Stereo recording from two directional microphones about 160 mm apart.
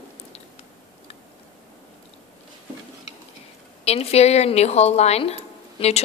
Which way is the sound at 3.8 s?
40° left (ahead or behind).